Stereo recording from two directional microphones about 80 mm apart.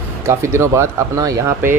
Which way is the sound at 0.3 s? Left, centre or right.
Right.